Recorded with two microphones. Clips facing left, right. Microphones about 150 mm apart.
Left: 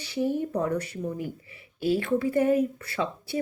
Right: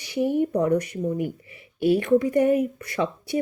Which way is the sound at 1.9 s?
20° right (ahead or behind).